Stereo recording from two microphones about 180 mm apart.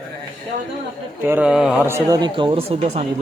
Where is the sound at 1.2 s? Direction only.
10° right (ahead or behind).